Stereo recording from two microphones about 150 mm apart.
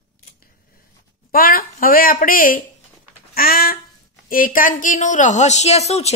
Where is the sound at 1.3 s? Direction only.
75° left (ahead or behind); by 6.1 s 45° left (ahead or behind).